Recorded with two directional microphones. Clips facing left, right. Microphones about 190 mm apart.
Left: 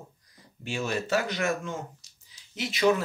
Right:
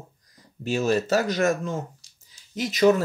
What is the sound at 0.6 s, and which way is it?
Speech, 40° right (ahead or behind).